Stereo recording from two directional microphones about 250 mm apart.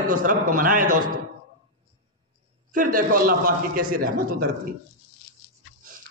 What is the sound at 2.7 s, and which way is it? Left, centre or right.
A man's voice, right.